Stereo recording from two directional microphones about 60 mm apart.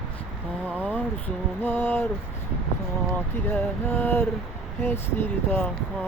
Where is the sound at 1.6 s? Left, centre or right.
Left.